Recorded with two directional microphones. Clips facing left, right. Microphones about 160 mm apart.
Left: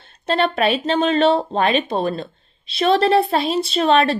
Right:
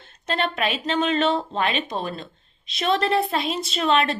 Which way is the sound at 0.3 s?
35° left (ahead or behind).